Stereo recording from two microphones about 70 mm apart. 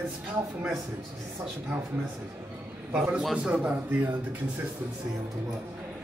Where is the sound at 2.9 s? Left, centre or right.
Centre.